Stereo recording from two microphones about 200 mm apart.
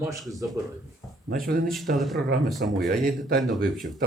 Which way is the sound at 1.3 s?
45° right (ahead or behind).